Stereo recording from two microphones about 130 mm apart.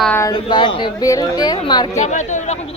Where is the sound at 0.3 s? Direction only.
40° left (ahead or behind).